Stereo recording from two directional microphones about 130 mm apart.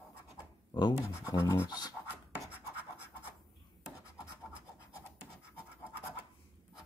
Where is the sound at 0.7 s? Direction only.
35° left (ahead or behind).